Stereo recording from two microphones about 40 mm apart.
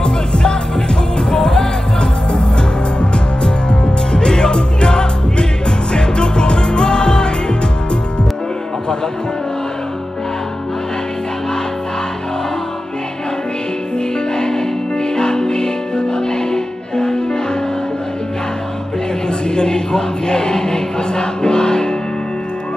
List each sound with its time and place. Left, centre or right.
0.0 s music: centre
13.9 s music: centre
19.2 s music: left